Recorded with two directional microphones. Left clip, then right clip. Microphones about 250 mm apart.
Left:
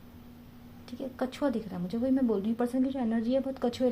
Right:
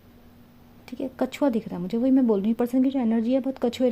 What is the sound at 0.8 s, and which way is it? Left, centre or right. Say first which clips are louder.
A woman's voice: right 6 dB; right.